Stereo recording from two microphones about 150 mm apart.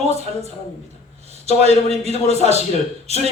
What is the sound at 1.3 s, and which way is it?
A man's voice, 45° right (ahead or behind).